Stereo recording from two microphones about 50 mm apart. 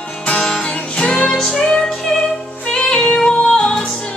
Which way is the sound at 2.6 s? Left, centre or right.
Centre.